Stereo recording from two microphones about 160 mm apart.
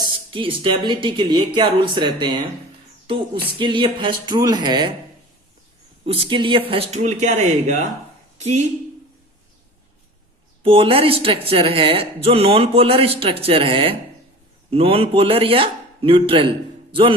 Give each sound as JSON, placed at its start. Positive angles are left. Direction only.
{"t": 0.0, "sound": "speech", "side_deg": -30}
{"t": 3.6, "sound": "speech", "side_deg": -30}
{"t": 6.1, "sound": "a woman's voice", "side_deg": -35}
{"t": 10.6, "sound": "speech", "side_deg": -35}